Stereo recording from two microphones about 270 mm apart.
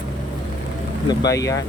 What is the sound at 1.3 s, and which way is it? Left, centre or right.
Speech, centre.